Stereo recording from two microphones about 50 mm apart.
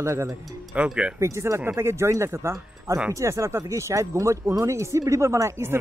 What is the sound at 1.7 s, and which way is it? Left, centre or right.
Speech, right.